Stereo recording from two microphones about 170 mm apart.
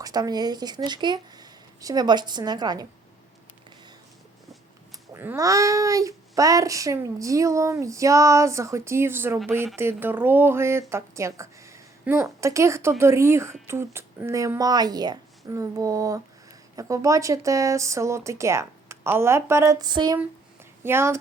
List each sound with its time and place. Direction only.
0.0 s a child's voice: 25° right (ahead or behind)
5.1 s a child's voice: 15° right (ahead or behind)
20.8 s speech: 15° right (ahead or behind)